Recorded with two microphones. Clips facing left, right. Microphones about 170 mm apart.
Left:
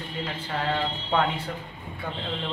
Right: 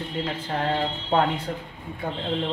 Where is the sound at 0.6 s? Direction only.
35° right (ahead or behind).